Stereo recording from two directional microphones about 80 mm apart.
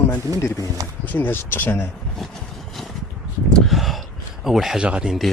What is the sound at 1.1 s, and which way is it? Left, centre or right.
Speech, left.